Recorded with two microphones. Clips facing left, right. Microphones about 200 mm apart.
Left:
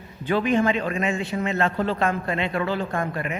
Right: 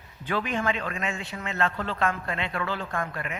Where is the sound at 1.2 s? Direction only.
35° left (ahead or behind).